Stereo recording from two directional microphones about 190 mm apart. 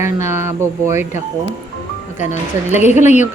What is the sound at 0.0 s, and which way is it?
Speech, 15° right (ahead or behind).